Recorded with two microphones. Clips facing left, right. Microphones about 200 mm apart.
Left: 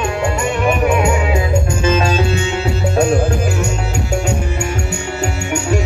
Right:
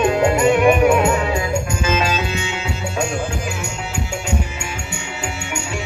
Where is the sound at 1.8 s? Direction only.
30° left (ahead or behind).